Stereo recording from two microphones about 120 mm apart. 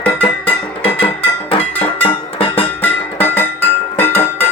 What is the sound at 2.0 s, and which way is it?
Music, 50° left (ahead or behind).